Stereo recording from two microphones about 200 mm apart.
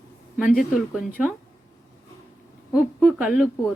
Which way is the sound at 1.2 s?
Centre (ahead or behind).